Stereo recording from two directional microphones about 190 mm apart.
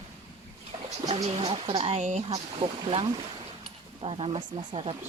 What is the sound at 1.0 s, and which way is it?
Speech, 35° right (ahead or behind).